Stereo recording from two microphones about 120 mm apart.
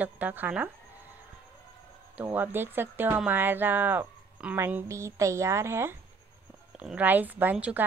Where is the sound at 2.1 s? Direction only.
15° right (ahead or behind).